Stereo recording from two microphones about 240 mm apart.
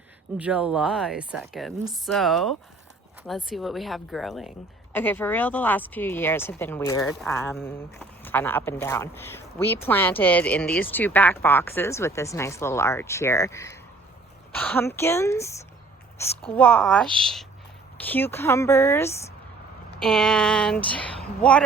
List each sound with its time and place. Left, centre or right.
0.3 s speech: centre